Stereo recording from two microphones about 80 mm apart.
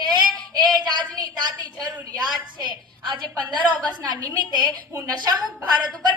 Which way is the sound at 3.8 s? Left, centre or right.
Right.